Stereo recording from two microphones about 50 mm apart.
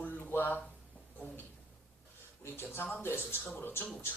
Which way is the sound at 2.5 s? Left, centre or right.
Left.